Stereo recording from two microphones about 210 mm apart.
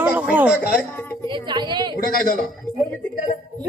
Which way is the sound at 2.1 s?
45° left (ahead or behind).